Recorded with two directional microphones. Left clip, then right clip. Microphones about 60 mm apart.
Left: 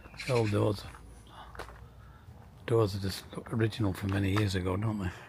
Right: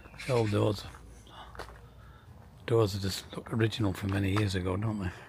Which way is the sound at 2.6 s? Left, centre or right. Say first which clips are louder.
Right 1 dB; centre.